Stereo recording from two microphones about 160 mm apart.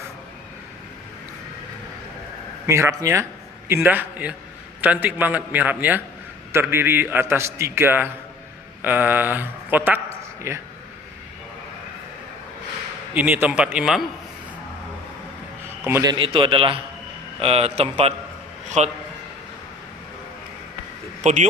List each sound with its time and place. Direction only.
2.6 s a man's voice: 20° right (ahead or behind)
13.1 s a man's voice: 10° right (ahead or behind)
15.9 s a man's voice: 20° right (ahead or behind)
16.1 s speech: 30° right (ahead or behind)
21.2 s speech: 45° right (ahead or behind)